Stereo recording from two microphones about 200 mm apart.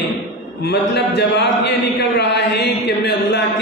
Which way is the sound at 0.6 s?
55° left (ahead or behind).